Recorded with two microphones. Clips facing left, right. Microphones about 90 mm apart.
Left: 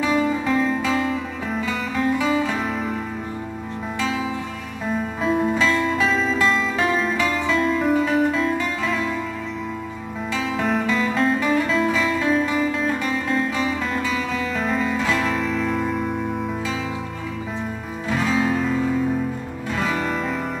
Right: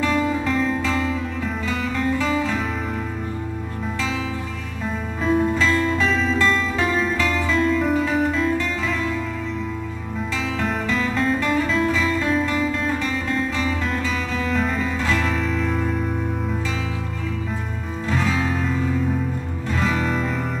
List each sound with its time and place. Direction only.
0.0 s music: 5° left (ahead or behind)
4.9 s music: centre (ahead or behind)
10.6 s music: 5° left (ahead or behind)
18.0 s music: 5° left (ahead or behind)